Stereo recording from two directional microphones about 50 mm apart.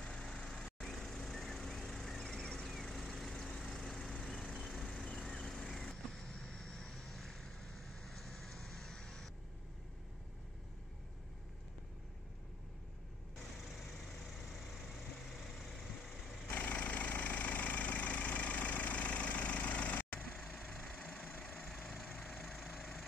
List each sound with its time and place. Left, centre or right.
0.0 s vehicle: centre
16.4 s vehicle: left
22.0 s a sound: centre
22.4 s vehicle: centre